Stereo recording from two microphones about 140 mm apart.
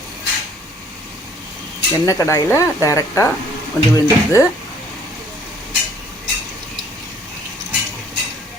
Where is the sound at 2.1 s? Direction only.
20° left (ahead or behind).